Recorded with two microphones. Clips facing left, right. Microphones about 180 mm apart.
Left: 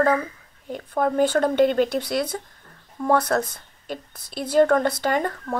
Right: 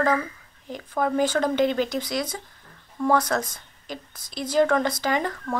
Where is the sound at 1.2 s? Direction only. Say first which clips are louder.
Left 4 dB; 55° left (ahead or behind).